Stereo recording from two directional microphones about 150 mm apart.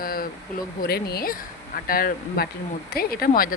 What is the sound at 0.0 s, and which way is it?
Speech, 75° left (ahead or behind).